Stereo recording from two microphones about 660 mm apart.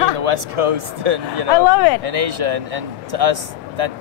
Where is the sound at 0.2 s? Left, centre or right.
Right.